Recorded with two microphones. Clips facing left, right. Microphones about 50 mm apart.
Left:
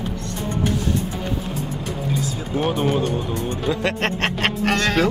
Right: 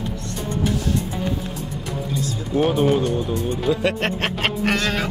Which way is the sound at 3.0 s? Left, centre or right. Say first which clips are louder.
Right 1 dB; left.